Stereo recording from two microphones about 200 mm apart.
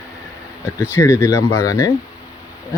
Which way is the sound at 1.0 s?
15° left (ahead or behind).